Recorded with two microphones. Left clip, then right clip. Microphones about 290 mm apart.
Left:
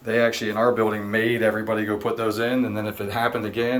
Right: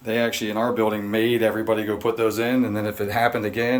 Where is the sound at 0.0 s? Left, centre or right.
Centre.